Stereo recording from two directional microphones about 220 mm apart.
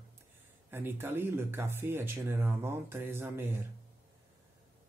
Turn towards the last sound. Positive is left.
turn(degrees=-10)  # may be behind; listen again after turning